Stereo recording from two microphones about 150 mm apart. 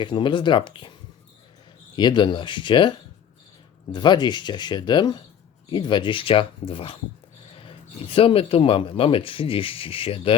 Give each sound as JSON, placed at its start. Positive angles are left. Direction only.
{"t": 0.0, "sound": "speech", "side_deg": 35}
{"t": 2.0, "sound": "speech", "side_deg": 30}
{"t": 3.9, "sound": "speech", "side_deg": 30}